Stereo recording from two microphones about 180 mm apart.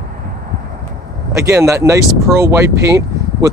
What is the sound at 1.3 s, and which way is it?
Speech, 15° right (ahead or behind).